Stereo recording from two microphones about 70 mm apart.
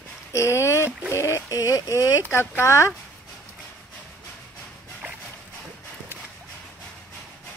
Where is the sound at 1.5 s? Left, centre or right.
Left.